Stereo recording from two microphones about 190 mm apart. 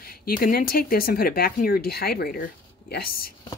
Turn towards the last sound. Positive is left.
turn(degrees=50)  # may be behind; listen again after turning